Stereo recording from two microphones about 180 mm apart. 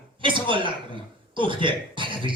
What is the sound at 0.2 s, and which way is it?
A woman's voice, 25° right (ahead or behind).